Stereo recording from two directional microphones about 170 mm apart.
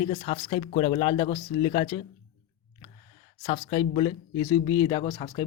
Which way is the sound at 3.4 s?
35° left (ahead or behind).